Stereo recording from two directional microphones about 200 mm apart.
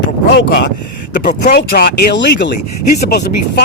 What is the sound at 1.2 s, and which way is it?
Speech, 40° left (ahead or behind).